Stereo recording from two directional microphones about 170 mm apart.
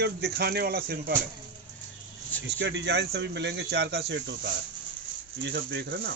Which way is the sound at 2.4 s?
90° right.